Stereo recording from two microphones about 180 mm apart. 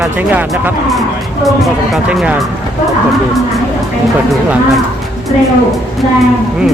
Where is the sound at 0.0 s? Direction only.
10° right (ahead or behind).